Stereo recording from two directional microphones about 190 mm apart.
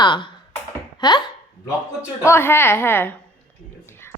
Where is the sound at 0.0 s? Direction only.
25° left (ahead or behind).